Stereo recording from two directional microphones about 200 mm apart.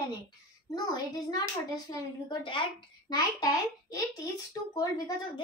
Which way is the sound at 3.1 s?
20° left (ahead or behind).